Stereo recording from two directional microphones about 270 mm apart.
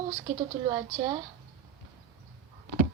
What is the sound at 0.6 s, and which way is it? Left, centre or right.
Speech, centre.